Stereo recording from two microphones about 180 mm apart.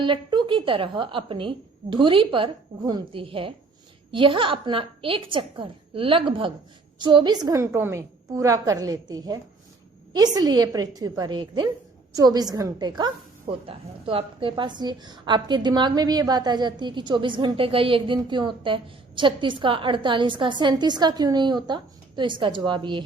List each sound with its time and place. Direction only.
0.0 s a woman's voice: 25° right (ahead or behind)